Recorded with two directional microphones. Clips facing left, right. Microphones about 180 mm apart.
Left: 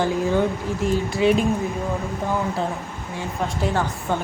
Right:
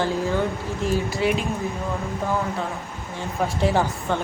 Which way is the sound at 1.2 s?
20° left (ahead or behind).